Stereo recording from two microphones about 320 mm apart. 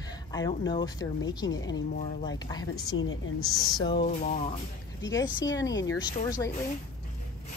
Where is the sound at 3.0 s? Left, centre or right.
Left.